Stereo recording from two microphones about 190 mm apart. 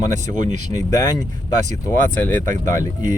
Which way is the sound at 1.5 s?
40° right (ahead or behind).